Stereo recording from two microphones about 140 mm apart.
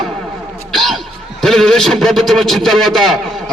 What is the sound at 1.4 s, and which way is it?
A man's voice, 5° left (ahead or behind).